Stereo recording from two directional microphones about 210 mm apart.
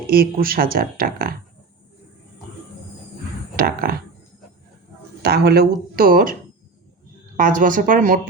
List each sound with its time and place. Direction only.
0.1 s speech: 45° right (ahead or behind)
3.5 s speech: 45° right (ahead or behind)
5.2 s speech: 50° right (ahead or behind)
7.3 s speech: 40° right (ahead or behind)